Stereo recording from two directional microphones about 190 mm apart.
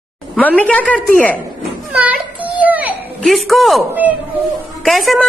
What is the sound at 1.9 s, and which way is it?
Children playing, 5° right (ahead or behind).